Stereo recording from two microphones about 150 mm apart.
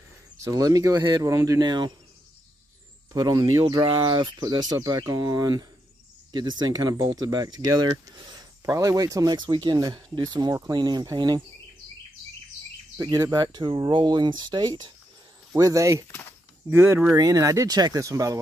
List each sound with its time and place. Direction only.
0.4 s speech: 25° right (ahead or behind)
3.1 s speech: 25° right (ahead or behind)
12.9 s speech: 25° right (ahead or behind)
16.1 s speech: 15° left (ahead or behind)
16.7 s speech: 15° right (ahead or behind)